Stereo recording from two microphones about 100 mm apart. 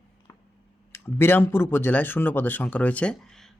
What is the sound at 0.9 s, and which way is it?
Speech, 25° left (ahead or behind).